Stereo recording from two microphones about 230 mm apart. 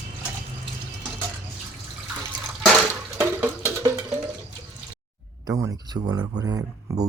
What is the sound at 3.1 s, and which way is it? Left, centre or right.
Music, centre.